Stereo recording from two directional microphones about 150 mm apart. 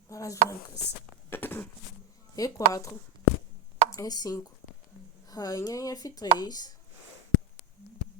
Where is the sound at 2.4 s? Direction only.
20° left (ahead or behind).